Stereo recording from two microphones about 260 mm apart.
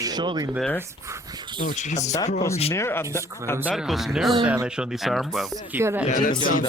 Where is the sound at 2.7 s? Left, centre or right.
Centre.